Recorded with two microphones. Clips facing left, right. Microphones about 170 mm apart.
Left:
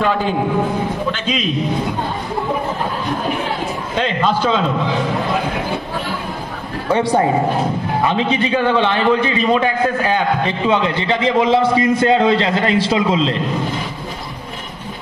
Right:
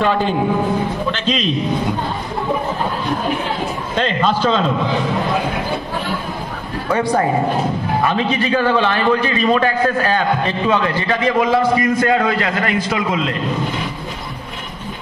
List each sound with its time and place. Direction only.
1.2 s a man's voice: 5° left (ahead or behind)
4.0 s a man's voice: 10° left (ahead or behind)
6.9 s a man's voice: 25° left (ahead or behind)